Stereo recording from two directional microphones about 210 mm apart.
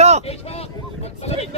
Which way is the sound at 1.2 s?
30° left (ahead or behind).